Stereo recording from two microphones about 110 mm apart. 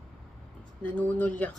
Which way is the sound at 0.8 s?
15° left (ahead or behind).